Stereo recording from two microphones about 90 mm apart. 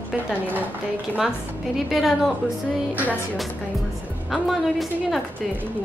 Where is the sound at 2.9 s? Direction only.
20° right (ahead or behind).